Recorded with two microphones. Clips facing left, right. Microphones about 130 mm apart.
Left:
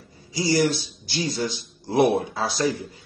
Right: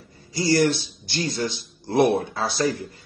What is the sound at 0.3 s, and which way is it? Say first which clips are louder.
A man's voice: right 1 dB; 10° left (ahead or behind).